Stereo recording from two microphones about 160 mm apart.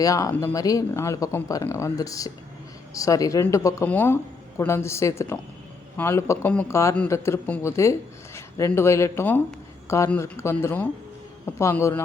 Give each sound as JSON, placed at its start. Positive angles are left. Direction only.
{"t": 0.0, "sound": "speech", "side_deg": 20}